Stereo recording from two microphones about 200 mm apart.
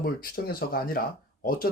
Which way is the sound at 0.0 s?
45° left (ahead or behind).